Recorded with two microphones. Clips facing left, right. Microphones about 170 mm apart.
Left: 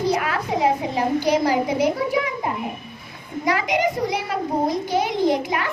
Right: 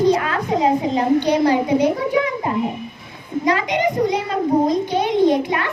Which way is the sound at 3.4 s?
10° left (ahead or behind).